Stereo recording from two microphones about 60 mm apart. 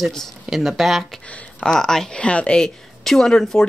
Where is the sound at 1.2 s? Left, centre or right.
Left.